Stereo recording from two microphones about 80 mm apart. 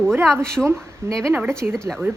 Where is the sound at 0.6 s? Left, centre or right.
Right.